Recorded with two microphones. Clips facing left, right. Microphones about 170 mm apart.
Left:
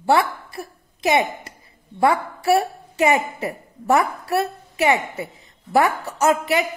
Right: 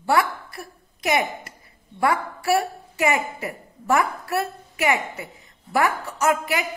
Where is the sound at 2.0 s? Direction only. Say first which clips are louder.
Left 4 dB; 25° left (ahead or behind).